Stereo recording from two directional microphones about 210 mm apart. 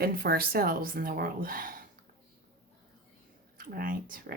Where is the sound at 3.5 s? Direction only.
45° right (ahead or behind).